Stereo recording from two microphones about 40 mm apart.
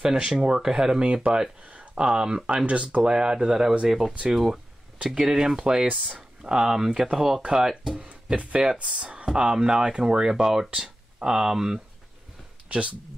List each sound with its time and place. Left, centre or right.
0.0 s speech: centre
1.7 s a sound: right
2.0 s speech: right
8.7 s speech: right; by 11.8 s centre
12.6 s speech: right